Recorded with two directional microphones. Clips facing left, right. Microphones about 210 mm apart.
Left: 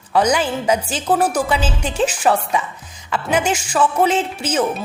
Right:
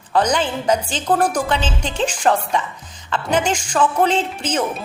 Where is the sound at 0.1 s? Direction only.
10° left (ahead or behind).